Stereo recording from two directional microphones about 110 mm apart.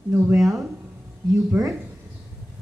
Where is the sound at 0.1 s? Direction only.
20° right (ahead or behind).